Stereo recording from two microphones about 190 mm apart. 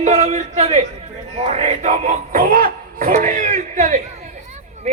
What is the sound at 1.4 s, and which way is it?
Speech, 35° right (ahead or behind).